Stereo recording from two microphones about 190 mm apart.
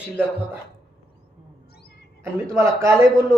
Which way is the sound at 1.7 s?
55° left (ahead or behind).